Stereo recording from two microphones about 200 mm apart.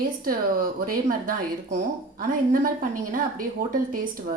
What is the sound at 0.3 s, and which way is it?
Speech, 45° right (ahead or behind).